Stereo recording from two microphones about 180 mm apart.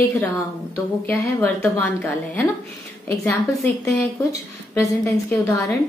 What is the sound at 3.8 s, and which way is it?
A woman's voice, 15° left (ahead or behind).